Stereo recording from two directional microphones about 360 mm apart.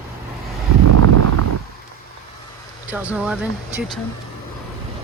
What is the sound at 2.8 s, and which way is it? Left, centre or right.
Speech, centre.